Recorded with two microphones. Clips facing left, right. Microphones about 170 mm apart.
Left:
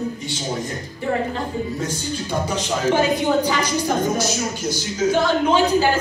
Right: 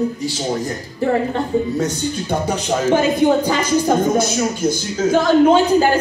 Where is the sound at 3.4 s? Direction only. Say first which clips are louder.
Right 3 dB; 50° right (ahead or behind).